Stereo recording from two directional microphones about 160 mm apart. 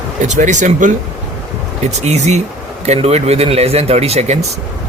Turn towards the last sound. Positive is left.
turn(degrees=-40)  # may be behind; listen again after turning